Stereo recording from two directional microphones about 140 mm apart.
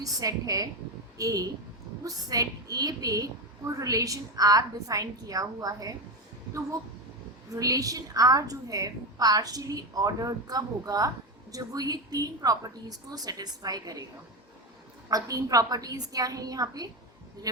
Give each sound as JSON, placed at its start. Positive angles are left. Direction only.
{"t": 0.0, "sound": "a woman's voice", "side_deg": -25}
{"t": 7.5, "sound": "a woman's voice", "side_deg": -25}
{"t": 15.1, "sound": "a woman's voice", "side_deg": -25}